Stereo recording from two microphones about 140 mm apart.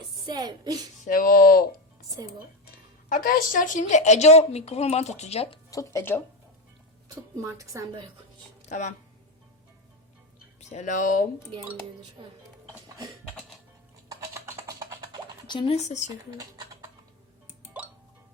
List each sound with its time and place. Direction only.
0.3 s a woman's voice: 30° right (ahead or behind)
1.0 s speech: 90° left
2.2 s a woman's voice: 25° right (ahead or behind)
3.1 s a woman's voice: 90° left; by 5.5 s 45° left (ahead or behind)
5.7 s speech: 20° left (ahead or behind)
7.3 s a woman's voice: 25° right (ahead or behind)
8.7 s speech: 55° left (ahead or behind)
10.6 s speech: 55° left (ahead or behind)
12.2 s speech: 30° right (ahead or behind)
14.1 s typing: 20° right (ahead or behind)
15.4 s speech: 35° left (ahead or behind)
15.7 s speech: 55° left (ahead or behind)